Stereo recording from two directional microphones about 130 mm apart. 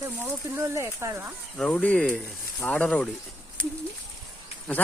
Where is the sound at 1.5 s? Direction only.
10° left (ahead or behind).